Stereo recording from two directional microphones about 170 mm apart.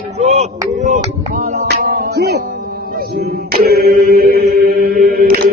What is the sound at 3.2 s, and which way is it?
Chant, 65° right (ahead or behind).